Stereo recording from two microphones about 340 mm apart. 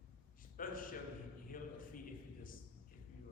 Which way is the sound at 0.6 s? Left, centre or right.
Left.